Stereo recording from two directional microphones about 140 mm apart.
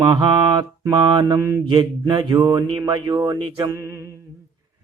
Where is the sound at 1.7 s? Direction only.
30° right (ahead or behind).